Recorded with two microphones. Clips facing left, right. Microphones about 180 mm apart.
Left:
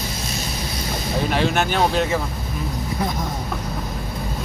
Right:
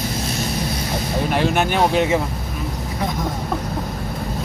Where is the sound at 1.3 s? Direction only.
10° right (ahead or behind).